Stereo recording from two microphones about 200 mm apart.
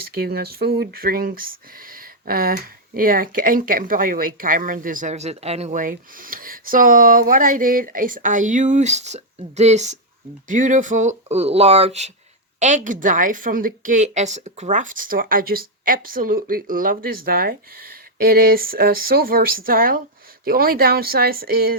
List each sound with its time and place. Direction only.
0.1 s speech: 50° right (ahead or behind)